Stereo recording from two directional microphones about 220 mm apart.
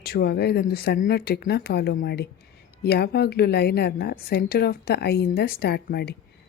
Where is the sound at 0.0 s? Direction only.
45° left (ahead or behind).